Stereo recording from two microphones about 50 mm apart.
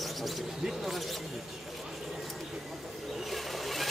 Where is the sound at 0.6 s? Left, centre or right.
Centre.